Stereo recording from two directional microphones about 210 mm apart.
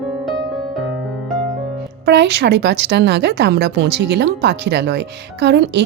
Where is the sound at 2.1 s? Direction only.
55° right (ahead or behind).